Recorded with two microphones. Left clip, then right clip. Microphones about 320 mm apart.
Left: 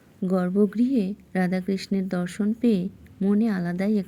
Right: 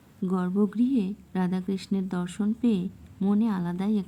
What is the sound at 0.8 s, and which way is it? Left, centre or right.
Speech, right.